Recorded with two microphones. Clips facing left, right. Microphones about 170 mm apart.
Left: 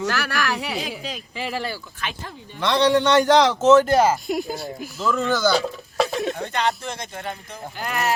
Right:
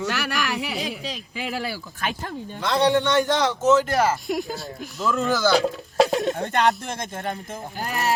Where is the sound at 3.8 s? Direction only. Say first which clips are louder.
Left 4 dB; 20° left (ahead or behind).